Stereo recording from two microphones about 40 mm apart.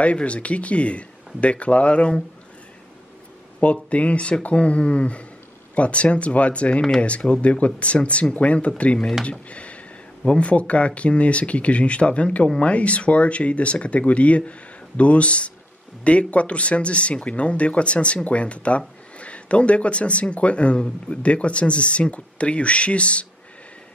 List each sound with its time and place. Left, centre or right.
0.0 s speech: left
3.9 s speech: left